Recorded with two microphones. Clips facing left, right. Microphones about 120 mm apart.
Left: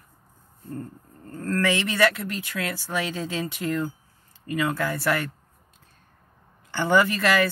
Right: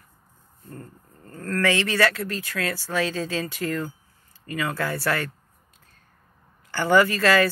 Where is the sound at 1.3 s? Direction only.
25° left (ahead or behind).